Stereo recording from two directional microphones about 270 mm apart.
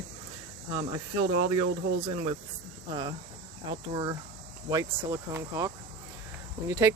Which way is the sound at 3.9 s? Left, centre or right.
Centre.